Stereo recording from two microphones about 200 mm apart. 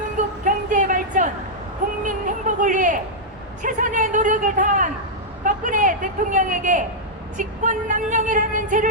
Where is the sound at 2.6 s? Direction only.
40° right (ahead or behind).